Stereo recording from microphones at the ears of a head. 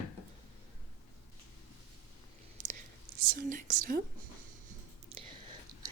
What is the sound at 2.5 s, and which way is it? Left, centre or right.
Whispering, right.